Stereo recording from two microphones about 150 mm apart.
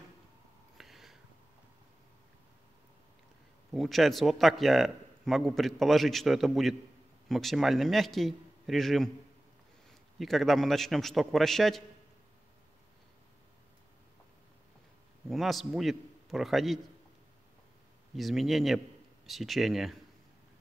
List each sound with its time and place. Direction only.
0.7 s a sound: centre (ahead or behind)
3.7 s a man's voice: centre (ahead or behind)
15.2 s a man's voice: centre (ahead or behind)
18.1 s a man's voice: centre (ahead or behind)